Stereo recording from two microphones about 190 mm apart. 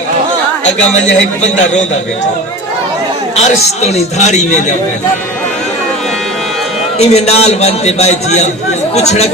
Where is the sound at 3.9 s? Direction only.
35° left (ahead or behind).